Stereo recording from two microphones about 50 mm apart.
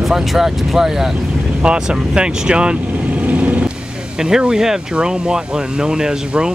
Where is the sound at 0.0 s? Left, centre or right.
Centre; by 3.7 s right.